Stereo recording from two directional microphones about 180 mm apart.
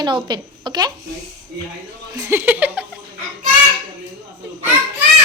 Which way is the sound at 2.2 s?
10° right (ahead or behind).